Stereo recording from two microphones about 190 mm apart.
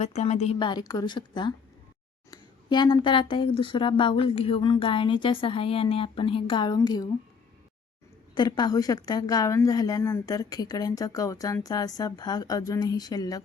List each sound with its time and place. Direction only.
0.0 s a woman's voice: 35° left (ahead or behind)
0.6 s a woman's voice: 20° left (ahead or behind)
8.4 s a woman's voice: 20° left (ahead or behind)